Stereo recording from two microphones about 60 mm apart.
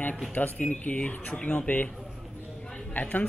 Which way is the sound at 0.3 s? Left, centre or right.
Left.